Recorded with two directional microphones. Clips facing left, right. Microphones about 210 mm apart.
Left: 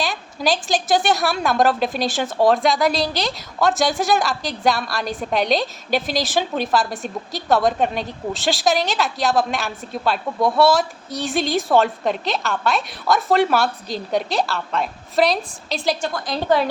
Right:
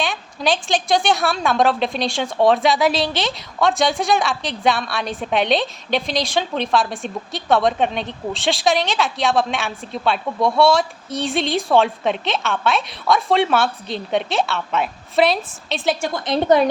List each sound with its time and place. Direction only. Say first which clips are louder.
0.0 s a sound: even; centre (ahead or behind)
0.7 s a woman's voice: even; centre (ahead or behind)
16.0 s a woman's voice: right 6 dB; 20° right (ahead or behind)